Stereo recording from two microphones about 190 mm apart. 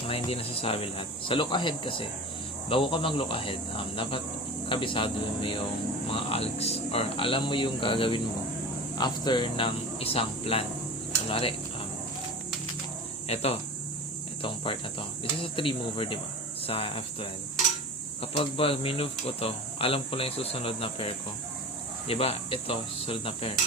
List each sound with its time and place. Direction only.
0.1 s speech: 30° left (ahead or behind)
13.2 s speech: 35° left (ahead or behind)